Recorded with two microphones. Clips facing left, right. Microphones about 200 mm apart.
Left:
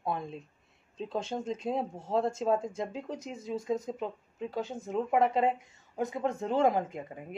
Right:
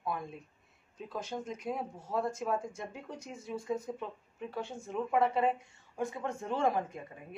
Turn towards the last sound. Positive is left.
turn(degrees=20)  # may be behind; listen again after turning